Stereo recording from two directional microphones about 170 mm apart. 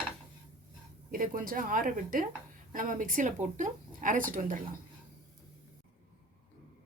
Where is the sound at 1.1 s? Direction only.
55° right (ahead or behind).